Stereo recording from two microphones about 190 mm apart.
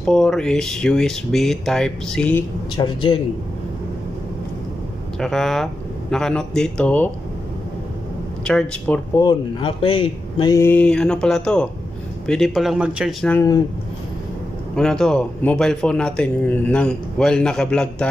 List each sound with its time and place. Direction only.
0.0 s speech: 5° left (ahead or behind)
2.8 s a man's voice: 25° left (ahead or behind)
5.2 s speech: centre (ahead or behind)
8.5 s speech: 5° left (ahead or behind)
9.2 s speech: 25° left (ahead or behind); by 13.3 s 5° right (ahead or behind)
13.3 s speech: 15° left (ahead or behind)
14.8 s speech: 5° left (ahead or behind)